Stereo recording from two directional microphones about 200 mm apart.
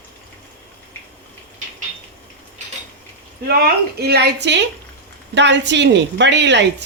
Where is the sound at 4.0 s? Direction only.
55° right (ahead or behind).